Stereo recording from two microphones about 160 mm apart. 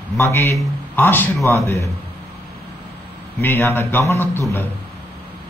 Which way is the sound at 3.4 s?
15° left (ahead or behind).